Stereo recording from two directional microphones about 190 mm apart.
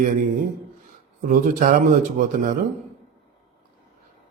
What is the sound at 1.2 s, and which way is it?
A man's voice, 45° right (ahead or behind).